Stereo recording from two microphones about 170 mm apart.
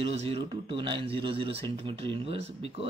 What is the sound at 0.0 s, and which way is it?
Speech, 35° right (ahead or behind).